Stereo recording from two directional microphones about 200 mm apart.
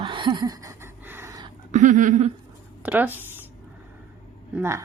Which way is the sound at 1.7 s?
35° right (ahead or behind).